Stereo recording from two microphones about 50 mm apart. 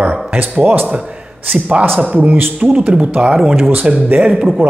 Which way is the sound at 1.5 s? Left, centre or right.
Right.